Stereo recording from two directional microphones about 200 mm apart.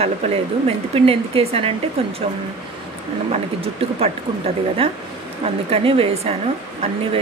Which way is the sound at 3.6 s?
30° right (ahead or behind).